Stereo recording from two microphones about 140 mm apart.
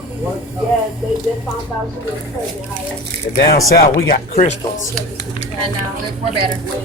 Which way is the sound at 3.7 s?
90° left.